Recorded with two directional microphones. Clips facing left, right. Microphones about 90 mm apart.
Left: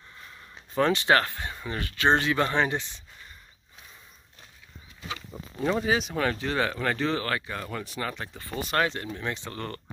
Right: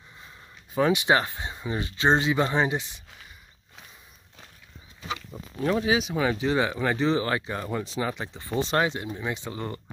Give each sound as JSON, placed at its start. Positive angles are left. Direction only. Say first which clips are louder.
{"t": 0.7, "sound": "speech", "louder": "even", "side_deg": -10}
{"t": 5.3, "sound": "speech", "louder": "right 1 dB", "side_deg": 0}